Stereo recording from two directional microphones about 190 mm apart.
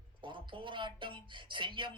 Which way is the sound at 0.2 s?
25° right (ahead or behind).